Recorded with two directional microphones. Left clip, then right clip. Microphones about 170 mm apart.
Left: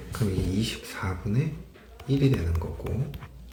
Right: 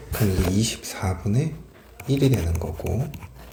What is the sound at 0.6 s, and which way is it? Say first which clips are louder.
Speech: right 4 dB; 40° right (ahead or behind).